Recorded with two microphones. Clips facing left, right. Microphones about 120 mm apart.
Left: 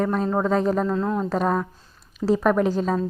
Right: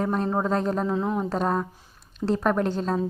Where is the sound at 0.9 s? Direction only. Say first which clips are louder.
Left 2 dB; 15° right (ahead or behind).